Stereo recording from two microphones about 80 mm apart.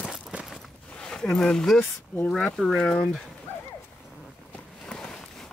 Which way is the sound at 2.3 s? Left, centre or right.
Centre.